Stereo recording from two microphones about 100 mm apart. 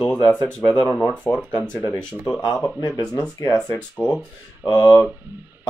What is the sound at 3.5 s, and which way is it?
Speech, 15° left (ahead or behind).